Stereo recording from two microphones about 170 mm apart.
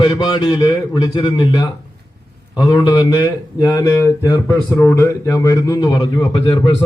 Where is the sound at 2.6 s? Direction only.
25° left (ahead or behind).